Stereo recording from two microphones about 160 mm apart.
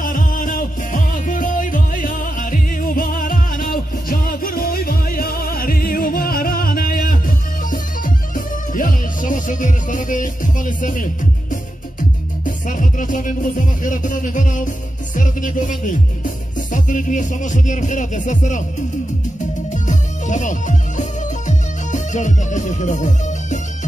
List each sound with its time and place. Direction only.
0.0 s music: 60° left (ahead or behind)
19.7 s music: 50° left (ahead or behind)